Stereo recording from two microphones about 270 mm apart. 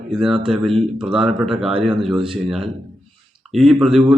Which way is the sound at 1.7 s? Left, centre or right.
Centre.